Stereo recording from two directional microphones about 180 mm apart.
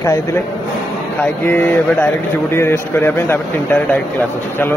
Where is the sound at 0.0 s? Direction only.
15° left (ahead or behind).